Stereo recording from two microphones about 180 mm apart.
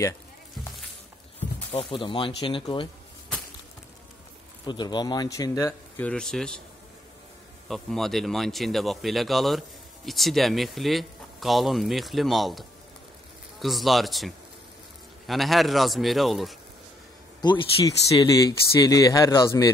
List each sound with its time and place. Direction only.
1.7 s speech: 30° left (ahead or behind)
4.6 s speech: 25° left (ahead or behind); by 6.6 s 5° left (ahead or behind)
7.6 s a man's voice: centre (ahead or behind)
17.4 s speech: 25° left (ahead or behind)